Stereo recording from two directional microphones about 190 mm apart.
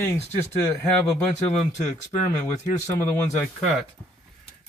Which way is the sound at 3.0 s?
10° left (ahead or behind).